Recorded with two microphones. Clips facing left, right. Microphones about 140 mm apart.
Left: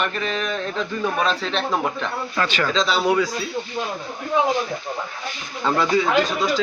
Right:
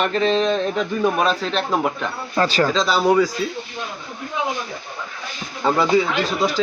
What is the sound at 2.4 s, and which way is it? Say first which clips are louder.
Speech: right 6 dB; 35° right (ahead or behind).